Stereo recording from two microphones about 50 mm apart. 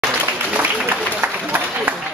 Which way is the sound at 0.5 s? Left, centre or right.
Right.